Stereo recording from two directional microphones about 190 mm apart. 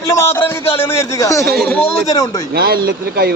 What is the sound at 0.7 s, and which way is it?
Speech, 15° left (ahead or behind).